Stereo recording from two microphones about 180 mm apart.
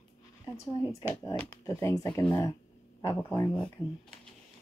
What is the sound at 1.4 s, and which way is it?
A woman's voice, 15° left (ahead or behind).